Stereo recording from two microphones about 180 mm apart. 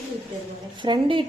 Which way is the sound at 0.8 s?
25° right (ahead or behind).